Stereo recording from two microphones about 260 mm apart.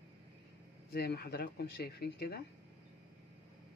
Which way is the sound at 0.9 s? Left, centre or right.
Left.